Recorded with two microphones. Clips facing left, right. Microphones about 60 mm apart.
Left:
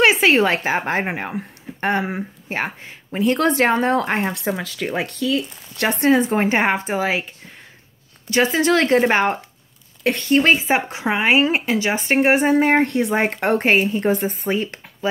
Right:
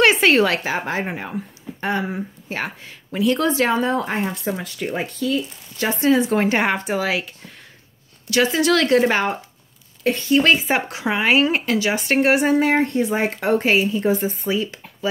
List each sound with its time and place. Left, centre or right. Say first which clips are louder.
0.0 s a sound: even; centre
0.4 s a woman's voice: left 1 dB; left
3.3 s speech: left 2 dB; left
4.6 s speech: left 2 dB; left
4.8 s speech: left 1 dB; left
6.0 s a woman's voice: left 1 dB; left
6.3 s speech: left 1 dB; left
8.3 s speech: left 1 dB; left
10.0 s speech: even; left
10.4 s speech: left 1 dB; left
12.8 s speech: left 1 dB; left